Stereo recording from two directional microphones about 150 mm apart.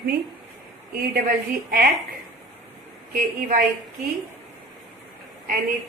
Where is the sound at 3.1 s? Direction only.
65° right (ahead or behind).